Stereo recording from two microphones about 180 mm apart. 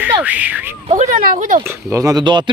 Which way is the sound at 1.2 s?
50° right (ahead or behind).